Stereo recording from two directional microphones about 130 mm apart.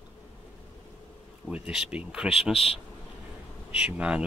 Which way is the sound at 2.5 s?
50° left (ahead or behind).